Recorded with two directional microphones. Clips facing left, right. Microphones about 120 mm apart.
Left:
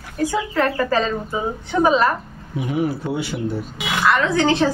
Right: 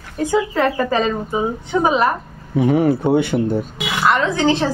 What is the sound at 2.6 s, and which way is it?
Speech, 60° right (ahead or behind).